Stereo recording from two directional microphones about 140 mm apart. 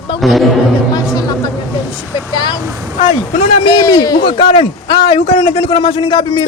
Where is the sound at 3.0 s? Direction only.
50° left (ahead or behind).